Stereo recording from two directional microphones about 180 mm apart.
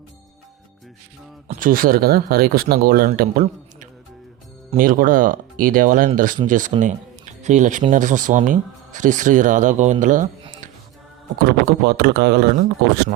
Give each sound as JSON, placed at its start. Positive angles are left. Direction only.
{"t": 1.5, "sound": "a man's voice", "side_deg": -50}
{"t": 11.4, "sound": "speech", "side_deg": -65}